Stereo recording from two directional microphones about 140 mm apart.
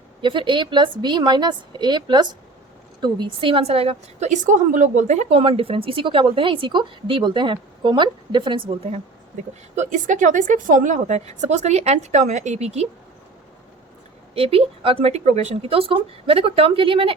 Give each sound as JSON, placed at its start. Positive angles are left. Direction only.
{"t": 0.2, "sound": "a woman's voice", "side_deg": -35}
{"t": 9.7, "sound": "a woman's voice", "side_deg": -60}
{"t": 14.3, "sound": "speech", "side_deg": -45}